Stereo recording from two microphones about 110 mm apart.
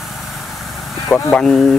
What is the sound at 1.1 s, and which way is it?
Speech, 5° left (ahead or behind).